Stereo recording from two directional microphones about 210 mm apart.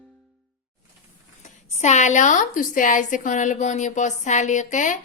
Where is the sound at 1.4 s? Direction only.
35° left (ahead or behind).